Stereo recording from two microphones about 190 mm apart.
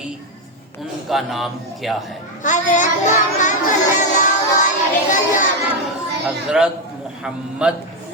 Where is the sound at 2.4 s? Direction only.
40° left (ahead or behind).